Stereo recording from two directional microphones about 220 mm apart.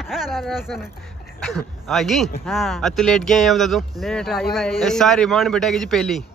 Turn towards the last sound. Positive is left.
turn(degrees=0)  # may be behind; listen again after turning